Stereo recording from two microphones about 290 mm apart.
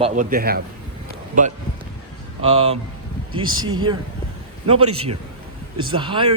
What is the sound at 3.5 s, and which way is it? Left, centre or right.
Speech, right.